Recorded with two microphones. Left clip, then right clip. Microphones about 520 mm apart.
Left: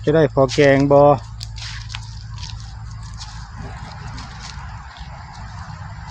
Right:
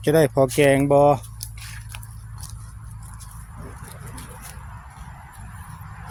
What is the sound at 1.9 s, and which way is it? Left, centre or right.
Biting, right.